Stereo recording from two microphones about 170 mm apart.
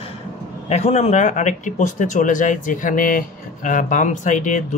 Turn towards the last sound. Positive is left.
turn(degrees=50)  # may be behind; listen again after turning